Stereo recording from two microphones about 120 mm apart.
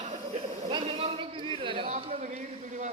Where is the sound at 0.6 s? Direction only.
60° right (ahead or behind).